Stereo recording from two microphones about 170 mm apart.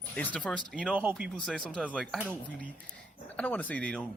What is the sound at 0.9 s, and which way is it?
Speech, 10° right (ahead or behind).